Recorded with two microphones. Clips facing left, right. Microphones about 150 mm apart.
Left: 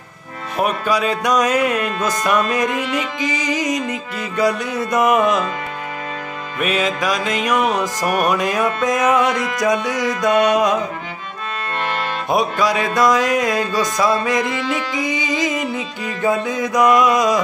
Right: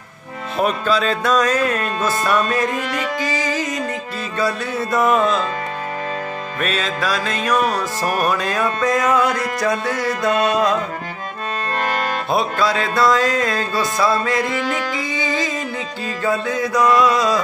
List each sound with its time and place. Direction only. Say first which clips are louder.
0.6 s music: even; 15° left (ahead or behind)
6.6 s music: left 3 dB; 15° left (ahead or behind)
12.3 s music: left 2 dB; 15° left (ahead or behind)